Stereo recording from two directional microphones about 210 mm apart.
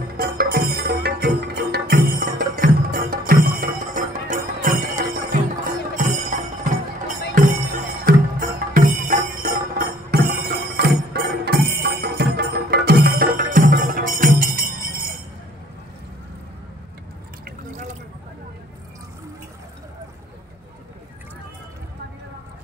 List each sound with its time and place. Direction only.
0.2 s music: 45° right (ahead or behind)
7.3 s music: 40° right (ahead or behind)
17.5 s drip: 35° right (ahead or behind)